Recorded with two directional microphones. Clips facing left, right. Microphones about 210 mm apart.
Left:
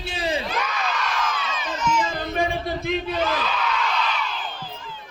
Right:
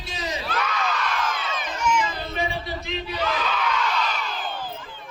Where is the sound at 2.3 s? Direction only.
50° left (ahead or behind).